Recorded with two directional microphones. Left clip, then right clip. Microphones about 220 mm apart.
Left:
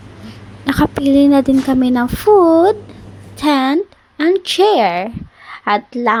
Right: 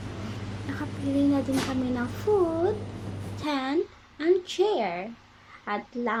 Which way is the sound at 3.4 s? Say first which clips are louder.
Left 15 dB; 40° left (ahead or behind).